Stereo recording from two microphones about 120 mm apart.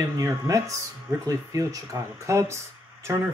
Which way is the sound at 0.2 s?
25° right (ahead or behind).